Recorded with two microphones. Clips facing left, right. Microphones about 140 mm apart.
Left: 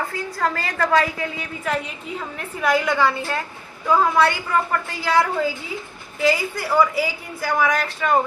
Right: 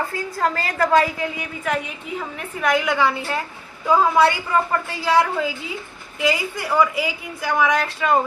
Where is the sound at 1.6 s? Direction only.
5° right (ahead or behind).